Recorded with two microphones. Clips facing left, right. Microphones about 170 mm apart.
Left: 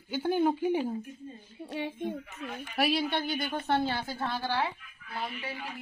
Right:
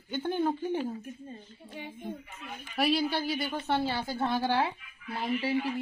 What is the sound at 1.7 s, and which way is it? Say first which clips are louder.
Speech: left 6 dB; 85° left.